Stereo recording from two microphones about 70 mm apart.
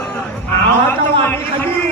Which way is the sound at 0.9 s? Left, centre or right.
Left.